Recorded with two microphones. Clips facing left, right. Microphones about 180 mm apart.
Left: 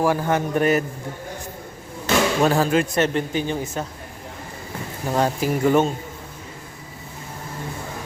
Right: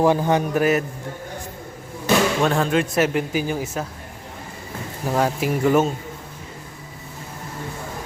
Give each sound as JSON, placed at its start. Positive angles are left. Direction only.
{"t": 0.0, "sound": "a man's voice", "side_deg": -20}
{"t": 0.5, "sound": "speech", "side_deg": 0}
{"t": 2.4, "sound": "speech", "side_deg": 5}
{"t": 5.0, "sound": "speech", "side_deg": 0}